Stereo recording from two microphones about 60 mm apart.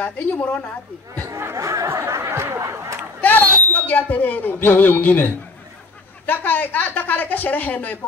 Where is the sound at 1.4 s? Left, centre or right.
Right.